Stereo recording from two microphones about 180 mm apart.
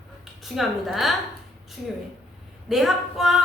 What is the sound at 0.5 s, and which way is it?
Speech, centre (ahead or behind).